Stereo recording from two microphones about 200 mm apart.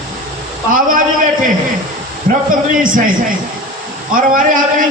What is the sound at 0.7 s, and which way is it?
Speech, 40° right (ahead or behind).